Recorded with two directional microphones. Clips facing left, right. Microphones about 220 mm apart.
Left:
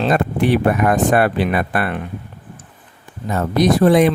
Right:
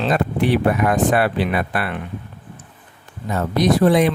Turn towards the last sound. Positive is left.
turn(degrees=50)  # may be behind; listen again after turning